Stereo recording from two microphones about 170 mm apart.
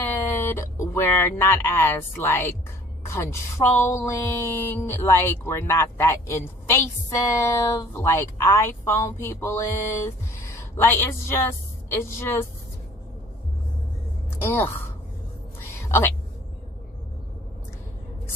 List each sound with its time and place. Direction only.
0.0 s a sound: 15° left (ahead or behind)
3.1 s speech: 15° left (ahead or behind)
14.4 s speech: 10° left (ahead or behind)
15.9 s a woman's voice: 15° left (ahead or behind)